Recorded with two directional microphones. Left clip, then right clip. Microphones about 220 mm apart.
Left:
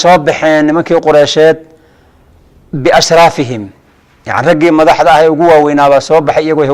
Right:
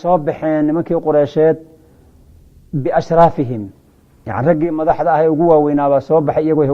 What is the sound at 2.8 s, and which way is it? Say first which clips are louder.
A man's voice: left 6 dB; 5° left (ahead or behind).